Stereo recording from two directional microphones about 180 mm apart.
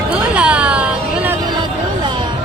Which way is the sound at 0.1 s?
5° right (ahead or behind).